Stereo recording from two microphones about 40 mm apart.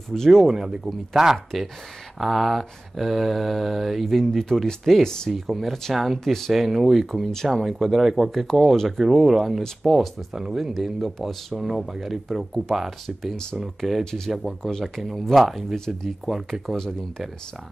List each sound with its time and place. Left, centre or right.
0.1 s speech: centre
0.5 s speech: centre
2.1 s mantra: centre
4.2 s speech: centre
5.5 s mantra: centre
5.9 s mantra: centre
8.3 s mantra: centre
8.7 s speech: centre
9.0 s mantra: centre
9.8 s speech: centre
10.8 s mantra: centre
11.6 s mantra: centre
14.3 s speech: centre
14.6 s mantra: centre